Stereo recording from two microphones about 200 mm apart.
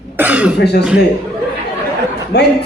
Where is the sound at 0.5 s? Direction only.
55° left (ahead or behind).